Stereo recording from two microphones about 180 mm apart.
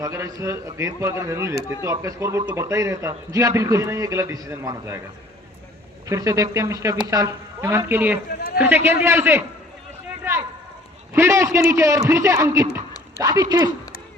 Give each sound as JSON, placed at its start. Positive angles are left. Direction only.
{"t": 0.0, "sound": "speech", "side_deg": -20}
{"t": 6.1, "sound": "speech", "side_deg": -20}
{"t": 8.3, "sound": "run", "side_deg": 65}
{"t": 8.5, "sound": "speech", "side_deg": -10}
{"t": 10.3, "sound": "a sound", "side_deg": -15}
{"t": 11.1, "sound": "speech", "side_deg": -15}